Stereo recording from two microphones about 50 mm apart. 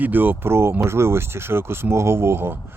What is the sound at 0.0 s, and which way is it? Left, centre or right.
Speech, right.